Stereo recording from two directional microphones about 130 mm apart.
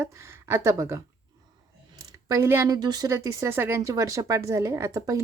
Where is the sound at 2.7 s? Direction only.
30° right (ahead or behind).